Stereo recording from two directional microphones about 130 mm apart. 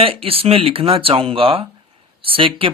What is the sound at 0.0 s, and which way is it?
Speech, 45° right (ahead or behind).